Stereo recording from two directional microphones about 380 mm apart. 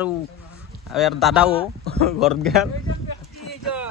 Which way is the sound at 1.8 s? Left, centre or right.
Right.